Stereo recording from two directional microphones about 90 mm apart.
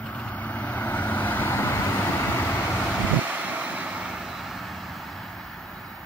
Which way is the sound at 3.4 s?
15° right (ahead or behind).